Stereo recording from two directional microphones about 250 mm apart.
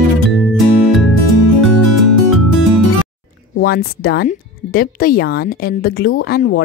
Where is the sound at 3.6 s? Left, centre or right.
Left.